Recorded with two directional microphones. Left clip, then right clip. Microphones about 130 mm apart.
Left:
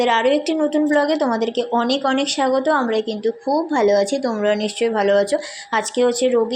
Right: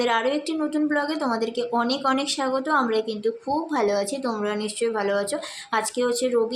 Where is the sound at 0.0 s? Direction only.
15° left (ahead or behind).